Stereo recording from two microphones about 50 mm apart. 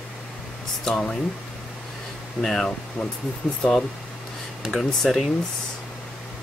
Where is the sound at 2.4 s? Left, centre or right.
Centre.